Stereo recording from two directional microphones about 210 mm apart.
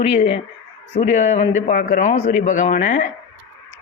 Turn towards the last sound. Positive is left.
turn(degrees=40)  # may be behind; listen again after turning